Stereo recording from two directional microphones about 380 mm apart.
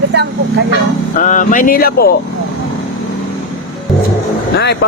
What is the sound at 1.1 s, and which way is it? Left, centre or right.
Speech, centre.